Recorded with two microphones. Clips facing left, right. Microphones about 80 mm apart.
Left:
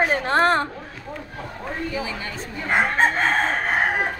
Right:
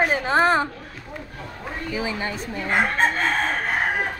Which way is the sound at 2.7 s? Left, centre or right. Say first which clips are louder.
Left 2 dB; centre.